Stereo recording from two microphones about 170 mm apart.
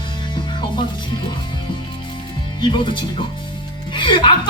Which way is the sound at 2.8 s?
30° left (ahead or behind).